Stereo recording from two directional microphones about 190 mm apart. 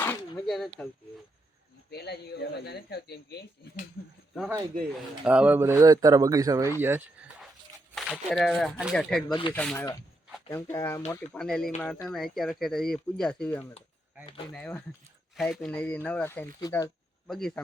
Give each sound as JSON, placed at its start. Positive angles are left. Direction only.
{"t": 0.0, "sound": "a sound", "side_deg": 10}
{"t": 0.4, "sound": "speech", "side_deg": 0}
{"t": 1.9, "sound": "speech", "side_deg": 55}
{"t": 4.4, "sound": "speech", "side_deg": -10}
{"t": 7.9, "sound": "speech", "side_deg": 5}
{"t": 11.1, "sound": "speech", "side_deg": 5}
{"t": 17.2, "sound": "speech", "side_deg": 0}